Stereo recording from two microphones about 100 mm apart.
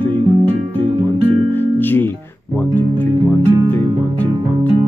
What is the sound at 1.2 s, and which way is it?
Music, 20° left (ahead or behind).